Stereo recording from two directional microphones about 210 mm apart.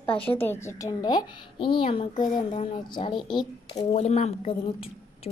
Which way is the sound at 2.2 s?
40° left (ahead or behind).